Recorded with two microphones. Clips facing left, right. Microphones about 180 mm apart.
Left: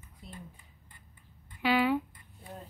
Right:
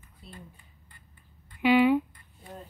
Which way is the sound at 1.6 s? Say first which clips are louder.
Right 6 dB; 15° right (ahead or behind).